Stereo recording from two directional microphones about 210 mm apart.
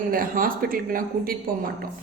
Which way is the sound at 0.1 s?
40° right (ahead or behind).